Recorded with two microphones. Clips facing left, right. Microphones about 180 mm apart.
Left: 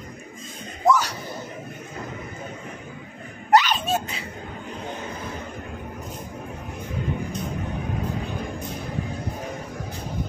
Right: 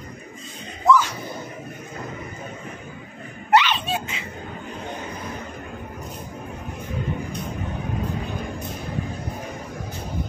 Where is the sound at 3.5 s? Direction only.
40° left (ahead or behind).